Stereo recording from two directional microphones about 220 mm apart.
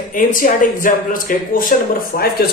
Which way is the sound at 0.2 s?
40° left (ahead or behind).